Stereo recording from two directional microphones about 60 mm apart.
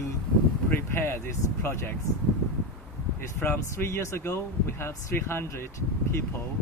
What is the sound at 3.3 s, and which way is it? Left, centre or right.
Speech, left.